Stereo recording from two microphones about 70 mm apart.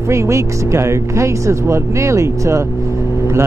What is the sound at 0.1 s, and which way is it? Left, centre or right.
Speech, right.